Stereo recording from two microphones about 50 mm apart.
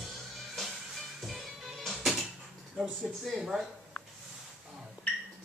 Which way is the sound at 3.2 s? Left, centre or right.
Centre.